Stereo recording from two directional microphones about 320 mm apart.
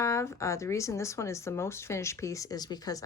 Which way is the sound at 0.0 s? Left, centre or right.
Centre.